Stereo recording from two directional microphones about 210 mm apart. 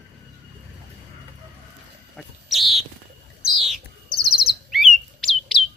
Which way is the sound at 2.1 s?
Centre (ahead or behind).